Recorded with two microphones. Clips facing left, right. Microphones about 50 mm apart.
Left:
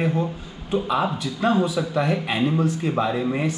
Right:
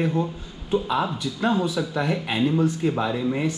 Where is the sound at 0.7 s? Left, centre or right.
Left.